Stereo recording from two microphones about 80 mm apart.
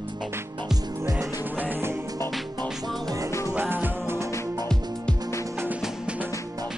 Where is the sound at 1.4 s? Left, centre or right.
Right.